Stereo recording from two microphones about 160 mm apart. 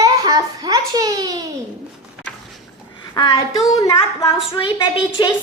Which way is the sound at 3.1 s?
25° left (ahead or behind).